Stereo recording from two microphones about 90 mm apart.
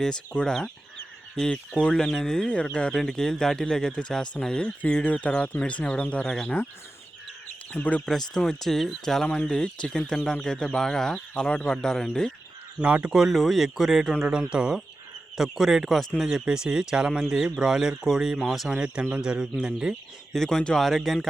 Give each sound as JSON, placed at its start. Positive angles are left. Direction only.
{"t": 0.0, "sound": "speech", "side_deg": 10}
{"t": 7.7, "sound": "speech", "side_deg": 15}
{"t": 8.0, "sound": "speech", "side_deg": 5}
{"t": 12.8, "sound": "speech", "side_deg": -15}
{"t": 20.3, "sound": "speech", "side_deg": 5}